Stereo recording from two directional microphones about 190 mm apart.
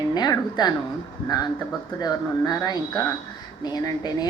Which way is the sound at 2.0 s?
20° left (ahead or behind).